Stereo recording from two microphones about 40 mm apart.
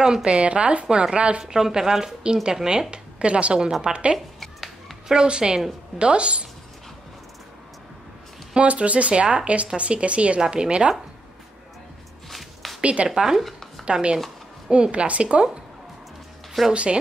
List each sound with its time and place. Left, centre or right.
0.0 s a woman's voice: right
0.8 s speech: centre
1.1 s a woman's voice: right
1.4 s a woman's voice: centre
4.4 s finger snapping: centre
5.0 s a woman's voice: centre
8.5 s a woman's voice: right
12.3 s a sound: centre
12.8 s speech: right
13.1 s speech: centre
13.4 s a sound: centre
14.7 s a woman's voice: right
16.7 s a woman's voice: right